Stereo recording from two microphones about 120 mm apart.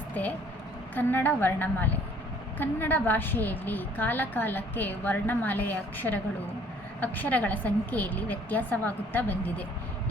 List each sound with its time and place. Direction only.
0.1 s a woman's voice: 15° left (ahead or behind)